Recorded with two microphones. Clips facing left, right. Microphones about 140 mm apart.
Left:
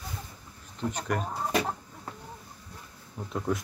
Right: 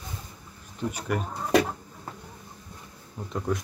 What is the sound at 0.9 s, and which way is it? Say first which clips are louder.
Speech: right 1 dB; 10° right (ahead or behind).